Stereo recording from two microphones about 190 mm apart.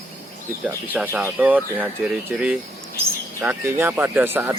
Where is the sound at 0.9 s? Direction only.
10° right (ahead or behind).